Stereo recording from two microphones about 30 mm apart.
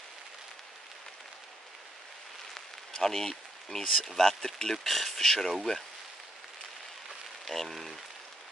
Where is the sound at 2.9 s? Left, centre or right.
Centre.